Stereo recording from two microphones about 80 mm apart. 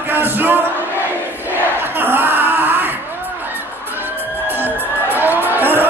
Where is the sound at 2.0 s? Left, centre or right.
Right.